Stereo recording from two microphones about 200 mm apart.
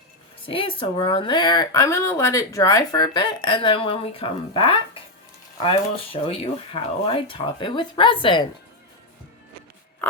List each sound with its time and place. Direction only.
0.4 s speech: 25° left (ahead or behind)